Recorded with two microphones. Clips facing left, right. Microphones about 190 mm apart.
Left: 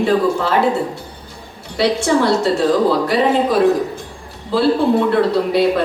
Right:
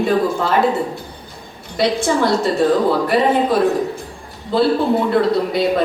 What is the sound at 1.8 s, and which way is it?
Speech, 65° left (ahead or behind).